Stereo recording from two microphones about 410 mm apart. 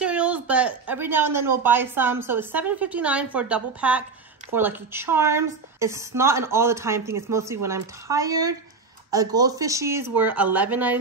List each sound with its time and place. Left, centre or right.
0.0 s a woman's voice: centre